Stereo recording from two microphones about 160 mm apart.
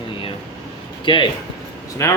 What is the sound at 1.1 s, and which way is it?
Speech, 30° left (ahead or behind).